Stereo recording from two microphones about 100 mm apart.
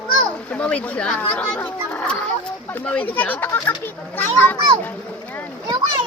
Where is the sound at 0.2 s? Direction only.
10° left (ahead or behind).